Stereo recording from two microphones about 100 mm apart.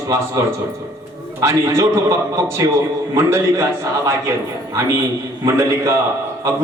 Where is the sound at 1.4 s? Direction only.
30° right (ahead or behind).